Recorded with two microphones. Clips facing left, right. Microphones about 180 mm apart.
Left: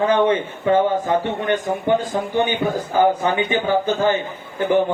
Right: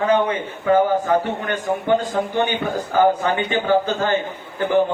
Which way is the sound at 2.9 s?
15° left (ahead or behind).